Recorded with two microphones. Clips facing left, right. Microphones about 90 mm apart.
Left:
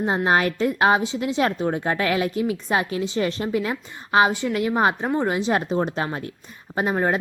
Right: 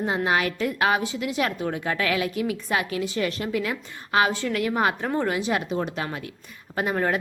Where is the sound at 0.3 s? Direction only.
35° left (ahead or behind).